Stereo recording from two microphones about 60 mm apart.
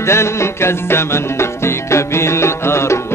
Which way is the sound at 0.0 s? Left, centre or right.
Left.